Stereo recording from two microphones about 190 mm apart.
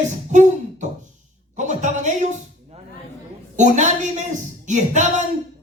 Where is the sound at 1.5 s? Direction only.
40° right (ahead or behind).